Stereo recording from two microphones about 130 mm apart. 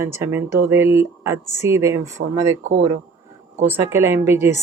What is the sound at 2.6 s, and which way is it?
Speech, 65° right (ahead or behind).